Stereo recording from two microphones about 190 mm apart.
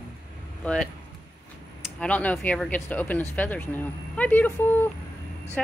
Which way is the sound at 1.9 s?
5° left (ahead or behind).